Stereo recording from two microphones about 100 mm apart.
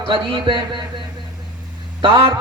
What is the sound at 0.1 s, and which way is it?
Speech, 55° right (ahead or behind).